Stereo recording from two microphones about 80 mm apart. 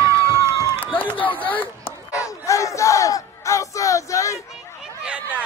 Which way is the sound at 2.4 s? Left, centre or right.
Left.